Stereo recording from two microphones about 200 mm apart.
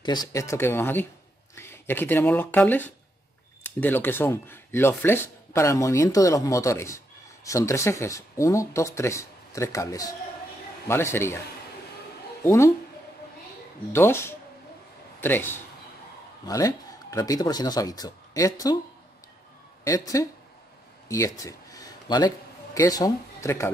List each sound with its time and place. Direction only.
0.0 s speech: 20° left (ahead or behind)
12.4 s speech: 15° left (ahead or behind)
13.9 s a man's voice: 10° left (ahead or behind)
19.8 s speech: 15° left (ahead or behind)
21.1 s a sound: 15° left (ahead or behind)
22.8 s speech: 20° left (ahead or behind)